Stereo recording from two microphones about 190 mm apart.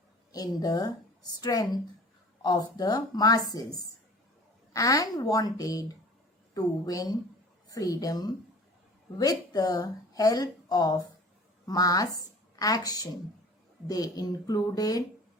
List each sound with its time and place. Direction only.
0.3 s speech: 20° left (ahead or behind)
4.7 s a woman's voice: 15° left (ahead or behind)